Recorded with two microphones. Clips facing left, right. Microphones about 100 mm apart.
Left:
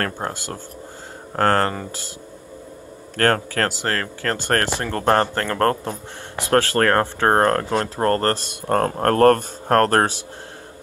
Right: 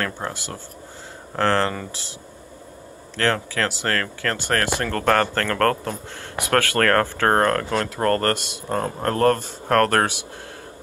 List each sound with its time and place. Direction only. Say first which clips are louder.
0.0 s speech: left 2 dB; 40° left (ahead or behind)
3.2 s speech: left 3 dB; 45° left (ahead or behind)
3.8 s speech: even; 30° left (ahead or behind)
8.5 s speech: left 5 dB; 55° left (ahead or behind)
9.7 s speech: left 2 dB; 35° left (ahead or behind)